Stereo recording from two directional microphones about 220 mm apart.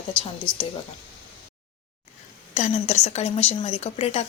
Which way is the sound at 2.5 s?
30° left (ahead or behind).